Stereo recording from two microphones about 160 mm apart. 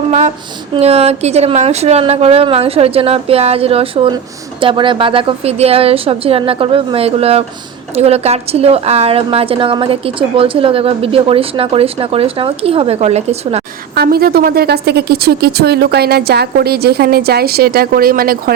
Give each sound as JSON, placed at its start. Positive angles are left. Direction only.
{"t": 0.1, "sound": "a sound", "side_deg": -45}
{"t": 0.7, "sound": "a woman's voice", "side_deg": -40}
{"t": 13.9, "sound": "a woman's voice", "side_deg": -75}